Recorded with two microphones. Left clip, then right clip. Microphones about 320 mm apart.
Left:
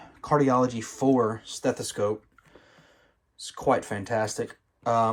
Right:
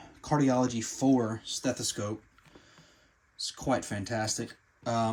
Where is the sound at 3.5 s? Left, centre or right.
Centre.